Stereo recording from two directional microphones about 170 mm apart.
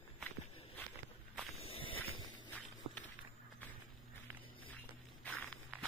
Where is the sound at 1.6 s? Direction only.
35° left (ahead or behind).